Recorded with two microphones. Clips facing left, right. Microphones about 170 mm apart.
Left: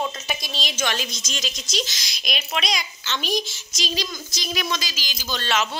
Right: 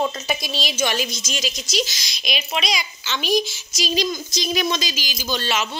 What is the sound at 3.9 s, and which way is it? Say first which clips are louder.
A woman's voice: right 9 dB; 20° right (ahead or behind).